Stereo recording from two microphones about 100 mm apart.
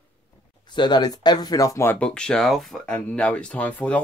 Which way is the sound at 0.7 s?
50° left (ahead or behind).